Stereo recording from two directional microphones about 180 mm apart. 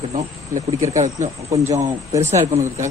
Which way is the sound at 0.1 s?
50° right (ahead or behind).